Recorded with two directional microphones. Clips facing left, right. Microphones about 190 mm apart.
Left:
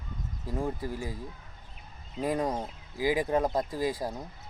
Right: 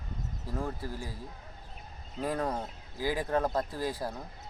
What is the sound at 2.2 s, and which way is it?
Speech, 15° left (ahead or behind).